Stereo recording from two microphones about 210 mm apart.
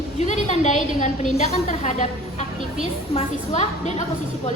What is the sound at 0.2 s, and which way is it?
A woman's voice, 30° left (ahead or behind).